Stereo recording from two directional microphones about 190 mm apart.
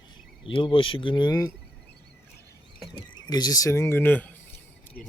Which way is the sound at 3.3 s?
20° left (ahead or behind).